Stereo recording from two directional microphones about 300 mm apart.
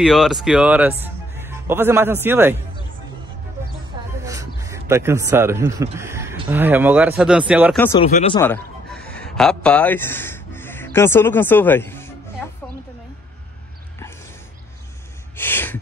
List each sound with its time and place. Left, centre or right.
0.0 s speech: centre
4.2 s a sound: centre
5.9 s speech: centre
8.0 s speech: centre
8.4 s a man's voice: centre
15.3 s a sound: centre